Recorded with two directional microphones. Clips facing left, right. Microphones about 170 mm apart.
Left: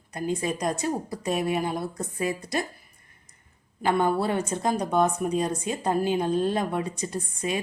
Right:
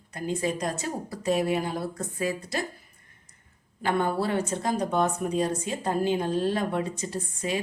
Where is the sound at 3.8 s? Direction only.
20° left (ahead or behind).